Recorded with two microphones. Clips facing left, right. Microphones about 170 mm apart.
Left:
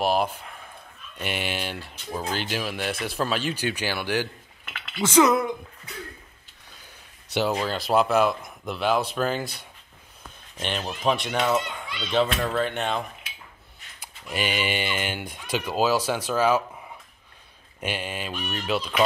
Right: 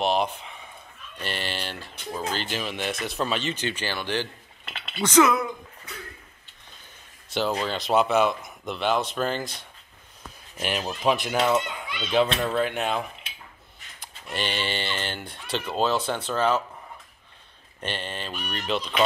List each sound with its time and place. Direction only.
0.0 s speech: 5° left (ahead or behind)
4.6 s a sound: 25° right (ahead or behind)
5.0 s speech: 10° left (ahead or behind)
7.3 s speech: 5° left (ahead or behind)
10.6 s speech: 5° right (ahead or behind)
14.0 s speech: 5° left (ahead or behind)
17.7 s speech: 10° left (ahead or behind)